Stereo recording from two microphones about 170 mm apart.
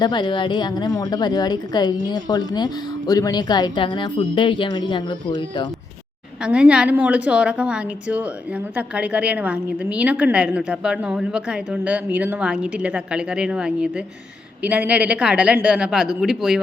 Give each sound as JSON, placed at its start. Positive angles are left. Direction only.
{"t": 0.0, "sound": "a woman's voice", "side_deg": 25}
{"t": 6.4, "sound": "a woman's voice", "side_deg": -5}